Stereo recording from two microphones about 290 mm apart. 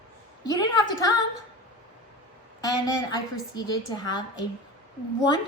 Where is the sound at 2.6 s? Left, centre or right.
Centre.